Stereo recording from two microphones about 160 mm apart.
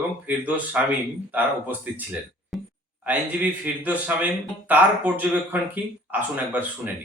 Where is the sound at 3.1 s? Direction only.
10° right (ahead or behind).